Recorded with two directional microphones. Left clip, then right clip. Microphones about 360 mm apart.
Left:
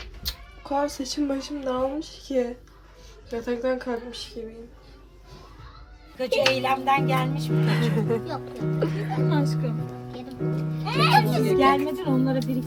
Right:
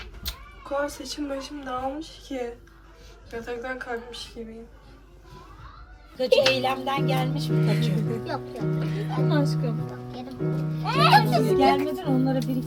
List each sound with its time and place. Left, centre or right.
0.0 s a sound: centre
0.9 s speech: centre
6.2 s speech: centre
9.0 s music: centre
10.9 s a child's voice: centre